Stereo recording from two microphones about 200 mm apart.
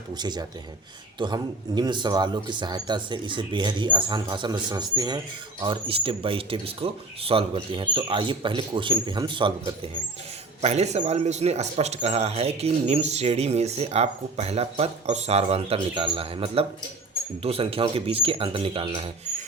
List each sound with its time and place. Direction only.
0.1 s speech: 20° right (ahead or behind)